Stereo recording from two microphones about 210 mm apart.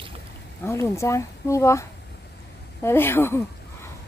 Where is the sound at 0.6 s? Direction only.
15° left (ahead or behind).